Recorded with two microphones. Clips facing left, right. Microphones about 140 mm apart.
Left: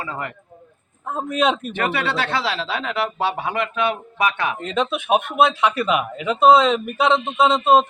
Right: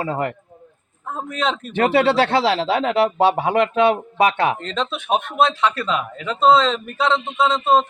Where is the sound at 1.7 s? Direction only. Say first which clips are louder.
Right 7 dB; 30° right (ahead or behind).